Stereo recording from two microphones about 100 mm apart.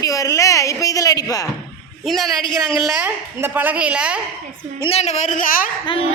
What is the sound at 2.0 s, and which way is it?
Child singing, centre (ahead or behind).